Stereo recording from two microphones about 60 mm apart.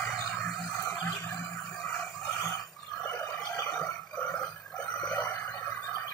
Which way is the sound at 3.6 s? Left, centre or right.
Centre.